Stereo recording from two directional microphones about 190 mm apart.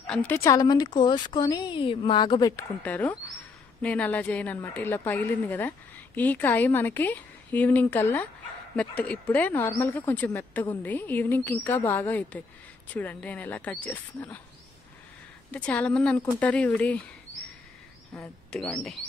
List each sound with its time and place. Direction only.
0.0 s speech: 5° left (ahead or behind)
2.8 s a woman's voice: 10° left (ahead or behind)
15.5 s a woman's voice: 5° left (ahead or behind)
18.5 s speech: 5° left (ahead or behind)